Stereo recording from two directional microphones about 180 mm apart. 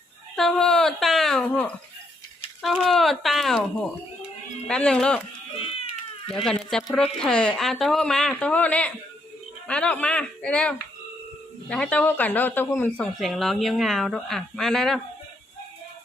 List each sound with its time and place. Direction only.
0.3 s speech: centre (ahead or behind)
4.7 s speech: 5° left (ahead or behind)
5.5 s cat: 30° left (ahead or behind)
6.3 s speech: 5° left (ahead or behind)
13.1 s speech: centre (ahead or behind)